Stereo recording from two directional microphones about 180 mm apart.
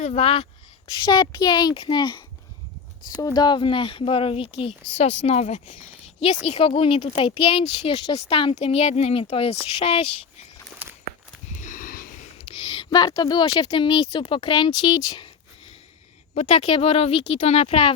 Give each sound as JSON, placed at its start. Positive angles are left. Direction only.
{"t": 0.0, "sound": "speech", "side_deg": 30}
{"t": 10.8, "sound": "walk", "side_deg": -10}
{"t": 11.5, "sound": "a sound", "side_deg": 45}
{"t": 12.4, "sound": "speech", "side_deg": 30}
{"t": 16.3, "sound": "speech", "side_deg": 35}